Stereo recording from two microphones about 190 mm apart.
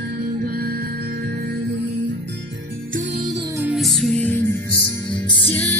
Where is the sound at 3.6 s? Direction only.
Centre (ahead or behind).